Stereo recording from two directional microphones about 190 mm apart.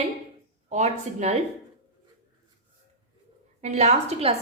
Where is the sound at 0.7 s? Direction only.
40° right (ahead or behind).